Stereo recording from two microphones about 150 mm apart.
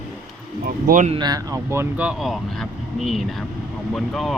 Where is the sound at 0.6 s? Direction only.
80° right.